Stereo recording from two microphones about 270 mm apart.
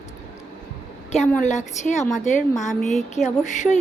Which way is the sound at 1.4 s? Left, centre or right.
Left.